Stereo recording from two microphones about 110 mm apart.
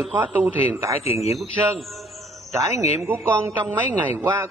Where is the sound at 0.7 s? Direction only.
25° right (ahead or behind).